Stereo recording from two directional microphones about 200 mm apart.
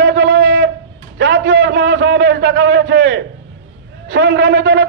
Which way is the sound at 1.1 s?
65° right (ahead or behind).